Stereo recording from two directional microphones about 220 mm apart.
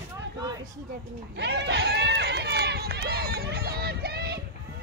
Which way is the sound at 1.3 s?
50° right (ahead or behind).